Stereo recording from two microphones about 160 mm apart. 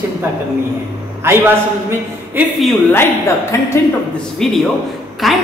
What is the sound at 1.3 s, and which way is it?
Speech, 15° right (ahead or behind).